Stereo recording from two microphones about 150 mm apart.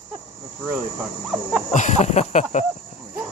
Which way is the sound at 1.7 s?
55° left (ahead or behind).